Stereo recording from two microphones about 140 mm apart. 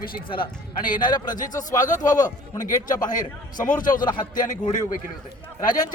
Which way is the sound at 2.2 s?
70° left (ahead or behind).